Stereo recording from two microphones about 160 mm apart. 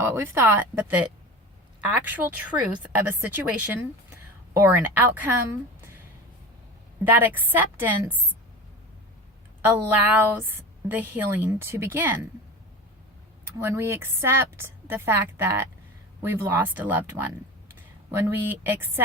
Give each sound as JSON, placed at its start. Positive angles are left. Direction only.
{"t": 0.0, "sound": "a woman's voice", "side_deg": -15}
{"t": 2.0, "sound": "a woman's voice", "side_deg": -10}
{"t": 7.0, "sound": "a woman's voice", "side_deg": -10}
{"t": 9.6, "sound": "a woman's voice", "side_deg": -10}
{"t": 13.4, "sound": "a woman's voice", "side_deg": -15}